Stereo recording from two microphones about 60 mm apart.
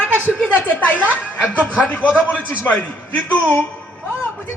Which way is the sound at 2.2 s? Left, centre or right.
Left.